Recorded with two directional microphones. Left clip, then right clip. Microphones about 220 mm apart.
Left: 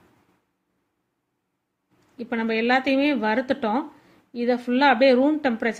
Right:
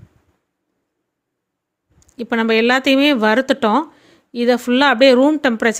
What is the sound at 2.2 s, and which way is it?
Speech, 50° right (ahead or behind).